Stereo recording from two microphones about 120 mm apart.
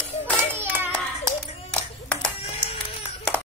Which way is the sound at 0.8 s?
20° right (ahead or behind).